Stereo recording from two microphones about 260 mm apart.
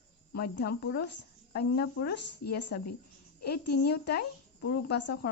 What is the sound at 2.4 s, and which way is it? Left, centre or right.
Speech, left.